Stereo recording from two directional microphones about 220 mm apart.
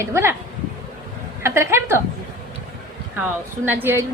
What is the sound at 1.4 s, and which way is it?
Speech, 10° right (ahead or behind).